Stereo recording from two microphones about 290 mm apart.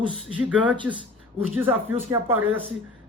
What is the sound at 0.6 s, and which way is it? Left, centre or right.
Speech, centre.